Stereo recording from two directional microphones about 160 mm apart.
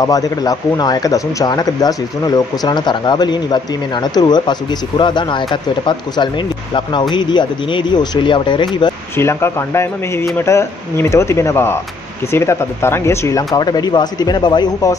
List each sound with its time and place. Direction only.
0.0 s speech: 20° left (ahead or behind)
9.1 s speech: 15° left (ahead or behind)